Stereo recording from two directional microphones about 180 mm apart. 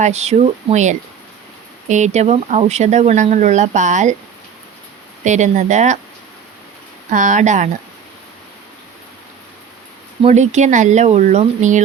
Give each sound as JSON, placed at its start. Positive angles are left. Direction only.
{"t": 0.0, "sound": "speech", "side_deg": -40}
{"t": 5.2, "sound": "speech", "side_deg": -40}
{"t": 7.1, "sound": "speech", "side_deg": -45}
{"t": 10.2, "sound": "speech", "side_deg": -40}